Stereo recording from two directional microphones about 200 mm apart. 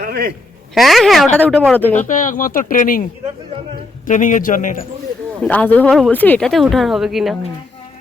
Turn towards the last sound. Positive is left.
turn(degrees=0)  # may be behind; listen again after turning